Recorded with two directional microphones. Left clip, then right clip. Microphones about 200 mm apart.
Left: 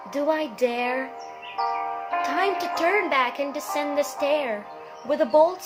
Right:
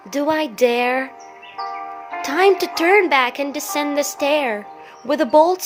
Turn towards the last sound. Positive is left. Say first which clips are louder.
# right 5 dB
turn(degrees=-55)  # may be behind; listen again after turning